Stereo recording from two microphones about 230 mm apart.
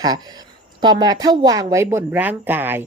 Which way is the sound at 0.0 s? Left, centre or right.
Centre.